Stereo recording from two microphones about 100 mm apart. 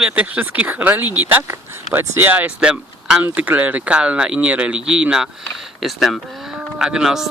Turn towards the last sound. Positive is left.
turn(degrees=-5)  # may be behind; listen again after turning